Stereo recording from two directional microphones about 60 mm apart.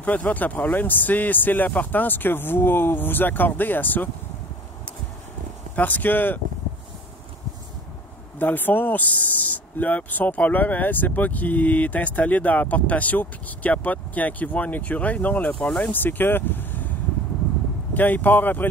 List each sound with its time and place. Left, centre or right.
0.0 s speech: left
5.8 s speech: left
8.4 s speech: left
15.6 s speech: centre
15.9 s speech: left
17.9 s speech: left